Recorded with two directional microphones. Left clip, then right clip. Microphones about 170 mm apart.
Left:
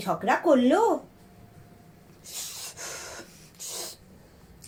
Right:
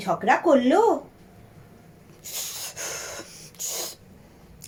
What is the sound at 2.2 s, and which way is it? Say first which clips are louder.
Snort: right 4 dB; 45° right (ahead or behind).